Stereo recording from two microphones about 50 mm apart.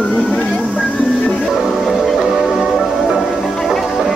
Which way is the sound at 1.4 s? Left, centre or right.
Centre.